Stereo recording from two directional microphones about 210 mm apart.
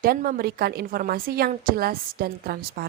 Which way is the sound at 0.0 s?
45° right (ahead or behind).